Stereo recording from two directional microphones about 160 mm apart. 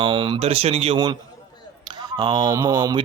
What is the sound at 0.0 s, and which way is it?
Speech, 30° right (ahead or behind).